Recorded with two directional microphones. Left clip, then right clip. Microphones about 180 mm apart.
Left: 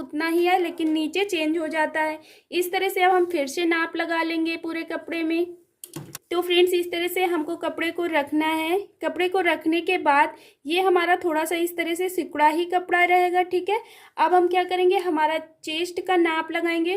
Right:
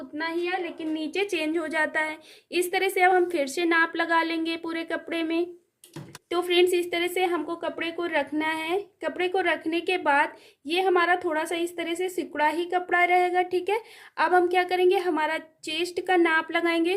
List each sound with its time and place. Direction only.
0.2 s a woman's voice: 35° left (ahead or behind)
1.1 s speech: 5° left (ahead or behind)